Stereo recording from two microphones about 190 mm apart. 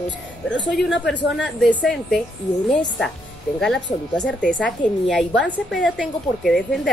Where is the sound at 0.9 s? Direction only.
75° left (ahead or behind).